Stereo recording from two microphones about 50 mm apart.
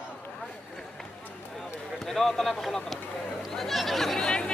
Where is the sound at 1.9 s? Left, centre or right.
Centre.